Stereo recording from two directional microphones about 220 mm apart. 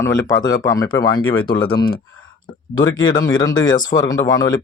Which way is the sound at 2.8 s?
60° left (ahead or behind).